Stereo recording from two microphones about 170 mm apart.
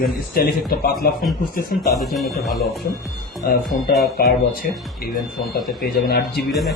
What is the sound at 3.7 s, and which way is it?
A man's voice, 55° left (ahead or behind).